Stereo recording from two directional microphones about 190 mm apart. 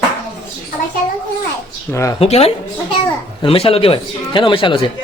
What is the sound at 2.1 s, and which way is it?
Speech, 30° left (ahead or behind).